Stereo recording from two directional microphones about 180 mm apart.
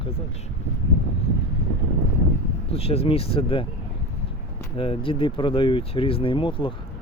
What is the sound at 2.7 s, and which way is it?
Speech, 35° left (ahead or behind).